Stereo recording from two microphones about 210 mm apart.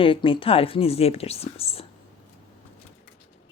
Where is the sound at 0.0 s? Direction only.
25° left (ahead or behind).